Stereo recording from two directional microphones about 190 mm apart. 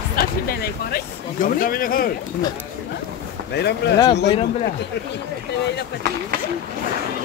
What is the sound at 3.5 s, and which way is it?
Speech, 60° left (ahead or behind).